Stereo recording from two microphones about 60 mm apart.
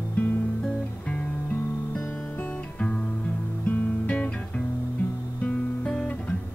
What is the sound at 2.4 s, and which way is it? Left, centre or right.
Music, left.